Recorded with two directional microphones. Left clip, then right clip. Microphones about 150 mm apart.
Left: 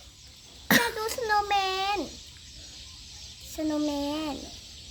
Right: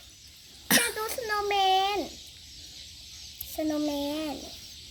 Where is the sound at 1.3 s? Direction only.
25° left (ahead or behind).